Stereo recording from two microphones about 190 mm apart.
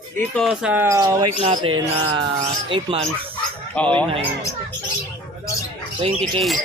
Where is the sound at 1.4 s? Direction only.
30° right (ahead or behind).